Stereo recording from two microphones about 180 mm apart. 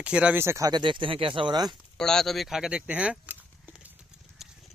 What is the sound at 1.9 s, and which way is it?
Speech, 5° left (ahead or behind).